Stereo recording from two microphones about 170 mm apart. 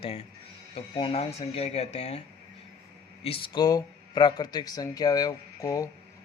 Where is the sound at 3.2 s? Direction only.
30° left (ahead or behind).